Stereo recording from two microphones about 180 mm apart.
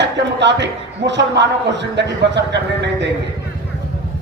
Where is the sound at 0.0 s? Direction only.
75° right (ahead or behind).